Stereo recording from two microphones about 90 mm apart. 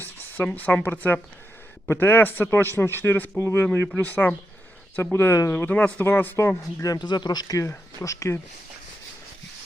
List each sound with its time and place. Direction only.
0.0 s a man's voice: 20° left (ahead or behind)
7.0 s speech: 55° left (ahead or behind); by 8.4 s 35° left (ahead or behind)